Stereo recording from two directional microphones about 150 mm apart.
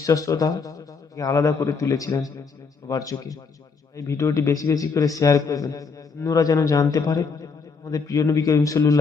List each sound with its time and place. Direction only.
0.0 s a man's voice: 20° left (ahead or behind)